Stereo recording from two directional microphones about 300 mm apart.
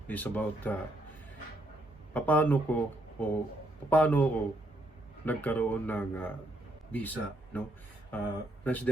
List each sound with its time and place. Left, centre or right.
0.1 s speech: centre
2.1 s speech: centre